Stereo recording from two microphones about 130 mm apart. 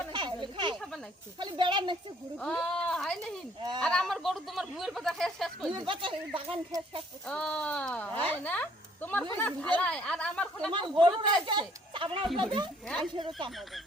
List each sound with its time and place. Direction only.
0.1 s a sound: 40° right (ahead or behind)
0.8 s snake: centre (ahead or behind)
1.4 s speech: 35° right (ahead or behind)
2.4 s speech: 5° left (ahead or behind)
5.7 s speech: 40° right (ahead or behind)
7.3 s speech: 5° left (ahead or behind)
10.7 s speech: 40° right (ahead or behind)